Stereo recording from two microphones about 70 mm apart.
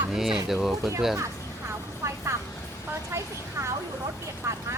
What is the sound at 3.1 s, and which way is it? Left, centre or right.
Speech, right.